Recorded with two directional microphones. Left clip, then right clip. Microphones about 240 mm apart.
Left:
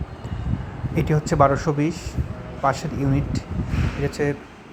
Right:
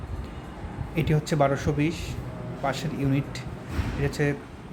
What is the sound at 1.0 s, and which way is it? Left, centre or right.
A man's voice, centre.